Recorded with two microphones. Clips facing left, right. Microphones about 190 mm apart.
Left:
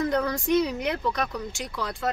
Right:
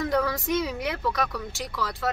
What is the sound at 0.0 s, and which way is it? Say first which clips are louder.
Speech: even; 5° right (ahead or behind).